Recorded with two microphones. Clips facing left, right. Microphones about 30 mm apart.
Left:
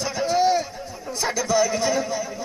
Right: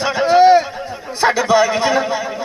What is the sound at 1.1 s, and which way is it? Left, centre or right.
A man's voice, right.